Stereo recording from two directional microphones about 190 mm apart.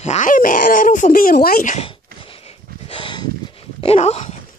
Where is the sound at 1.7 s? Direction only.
30° left (ahead or behind).